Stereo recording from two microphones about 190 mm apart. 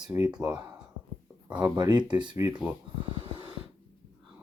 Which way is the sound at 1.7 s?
20° right (ahead or behind).